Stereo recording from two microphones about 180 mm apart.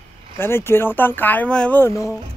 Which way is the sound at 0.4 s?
15° left (ahead or behind).